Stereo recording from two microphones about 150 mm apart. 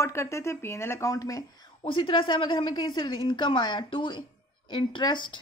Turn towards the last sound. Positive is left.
turn(degrees=30)  # may be behind; listen again after turning